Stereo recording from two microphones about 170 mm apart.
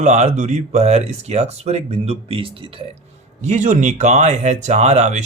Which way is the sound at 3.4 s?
45° right (ahead or behind).